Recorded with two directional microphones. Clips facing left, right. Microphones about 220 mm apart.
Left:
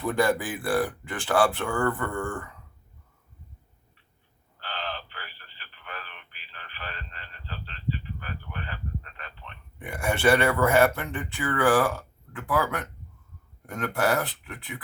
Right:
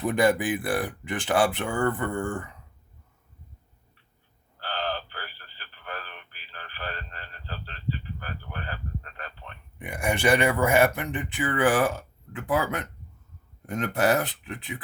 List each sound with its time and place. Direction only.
0.0 s speech: 20° right (ahead or behind)
4.6 s radio: 40° right (ahead or behind)
9.7 s speech: 15° right (ahead or behind)